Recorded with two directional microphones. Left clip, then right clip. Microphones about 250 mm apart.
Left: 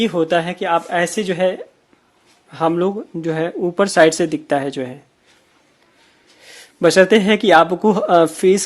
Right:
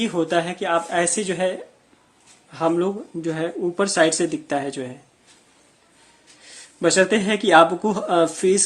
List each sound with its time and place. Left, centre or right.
0.0 s speech: left
6.4 s a man's voice: left